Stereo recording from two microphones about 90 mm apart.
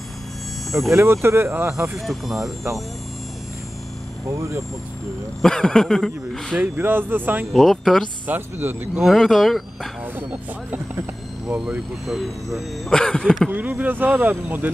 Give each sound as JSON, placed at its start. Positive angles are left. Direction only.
{"t": 0.7, "sound": "speech", "side_deg": 0}
{"t": 0.9, "sound": "speech", "side_deg": -25}
{"t": 2.0, "sound": "speech", "side_deg": 0}
{"t": 4.3, "sound": "speech", "side_deg": -30}
{"t": 5.4, "sound": "speech", "side_deg": 5}
{"t": 6.5, "sound": "speech", "side_deg": -20}
{"t": 7.5, "sound": "speech", "side_deg": 0}
{"t": 8.3, "sound": "speech", "side_deg": -20}
{"t": 9.0, "sound": "speech", "side_deg": 0}
{"t": 11.4, "sound": "speech", "side_deg": -5}
{"t": 13.5, "sound": "speech", "side_deg": -20}